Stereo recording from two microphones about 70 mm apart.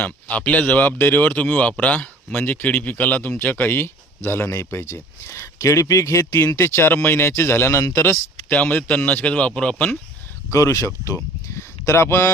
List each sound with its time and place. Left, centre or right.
0.0 s speech: left
8.4 s speech: left
10.5 s speech: left